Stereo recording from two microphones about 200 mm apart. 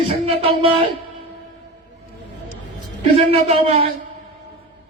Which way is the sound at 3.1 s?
30° right (ahead or behind).